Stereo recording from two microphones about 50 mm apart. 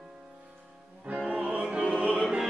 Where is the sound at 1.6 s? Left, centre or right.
Centre.